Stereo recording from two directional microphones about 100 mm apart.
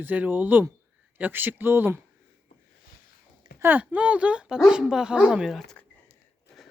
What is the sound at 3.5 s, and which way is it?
Speech, 20° right (ahead or behind).